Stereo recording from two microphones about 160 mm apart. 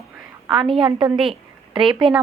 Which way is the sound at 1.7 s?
30° right (ahead or behind).